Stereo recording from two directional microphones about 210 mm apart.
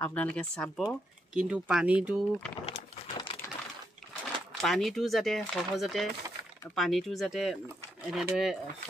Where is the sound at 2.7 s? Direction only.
35° left (ahead or behind).